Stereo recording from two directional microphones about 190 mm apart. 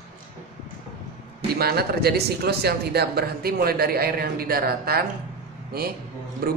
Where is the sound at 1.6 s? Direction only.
55° right (ahead or behind).